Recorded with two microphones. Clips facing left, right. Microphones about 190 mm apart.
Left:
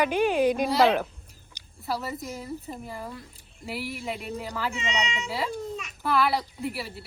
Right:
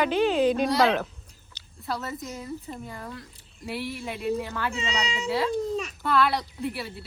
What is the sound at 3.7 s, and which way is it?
Speech, centre (ahead or behind).